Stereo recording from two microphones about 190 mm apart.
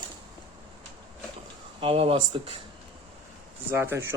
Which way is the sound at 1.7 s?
30° right (ahead or behind).